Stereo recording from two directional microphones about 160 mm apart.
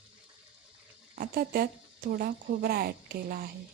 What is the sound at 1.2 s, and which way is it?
Speech, 70° right (ahead or behind).